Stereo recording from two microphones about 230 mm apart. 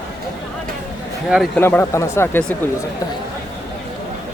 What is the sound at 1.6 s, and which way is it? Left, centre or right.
Speech, centre.